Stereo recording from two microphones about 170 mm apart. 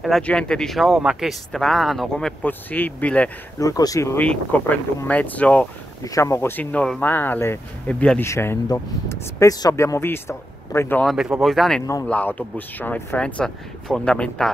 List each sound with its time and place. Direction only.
0.0 s speech: 5° left (ahead or behind)
3.5 s speech: 20° left (ahead or behind)
6.0 s speech: 20° left (ahead or behind)
11.1 s speech: 5° right (ahead or behind)